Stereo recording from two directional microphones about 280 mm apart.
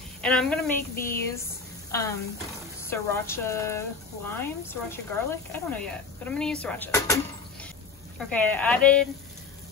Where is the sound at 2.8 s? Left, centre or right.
Centre.